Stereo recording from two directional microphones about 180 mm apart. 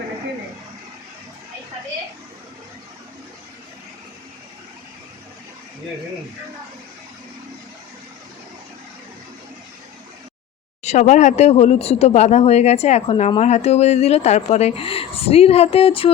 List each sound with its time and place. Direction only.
10.8 s speech: 40° left (ahead or behind)